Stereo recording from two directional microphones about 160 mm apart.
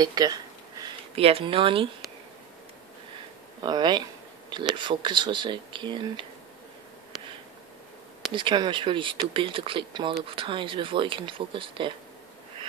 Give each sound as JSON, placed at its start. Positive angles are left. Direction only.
{"t": 0.0, "sound": "a sound", "side_deg": -25}
{"t": 1.1, "sound": "speech", "side_deg": -40}
{"t": 3.6, "sound": "speech", "side_deg": -25}
{"t": 8.3, "sound": "speech", "side_deg": -30}